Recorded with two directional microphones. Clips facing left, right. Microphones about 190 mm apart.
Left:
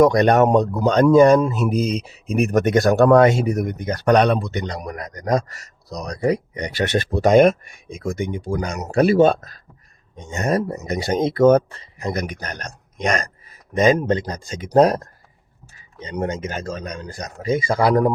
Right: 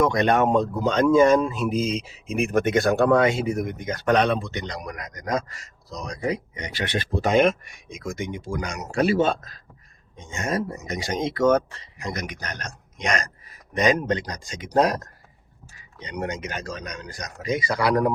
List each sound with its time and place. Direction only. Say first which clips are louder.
0.0 s speech: left 6 dB; 40° left (ahead or behind)